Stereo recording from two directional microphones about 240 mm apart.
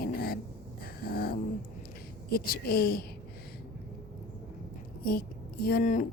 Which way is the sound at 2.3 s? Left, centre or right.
Left.